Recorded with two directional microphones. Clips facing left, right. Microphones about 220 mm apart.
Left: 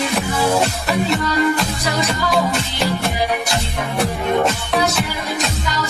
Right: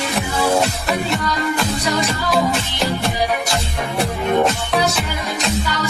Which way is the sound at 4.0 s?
Centre (ahead or behind).